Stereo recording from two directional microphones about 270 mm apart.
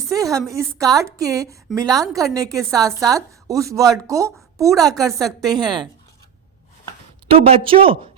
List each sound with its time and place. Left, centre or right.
0.1 s a woman's voice: centre
7.3 s speech: right